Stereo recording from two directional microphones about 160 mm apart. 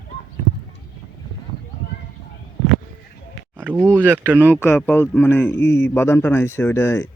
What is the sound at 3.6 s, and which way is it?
Speech, 10° right (ahead or behind).